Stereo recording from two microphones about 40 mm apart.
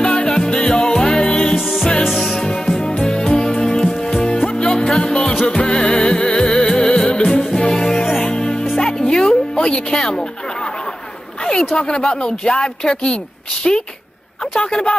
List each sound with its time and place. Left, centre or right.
0.0 s music: centre
2.0 s music: centre
3.0 s music: left
11.7 s speech: left